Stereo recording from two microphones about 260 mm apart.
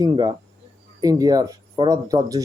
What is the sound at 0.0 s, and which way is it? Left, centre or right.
Speech, centre.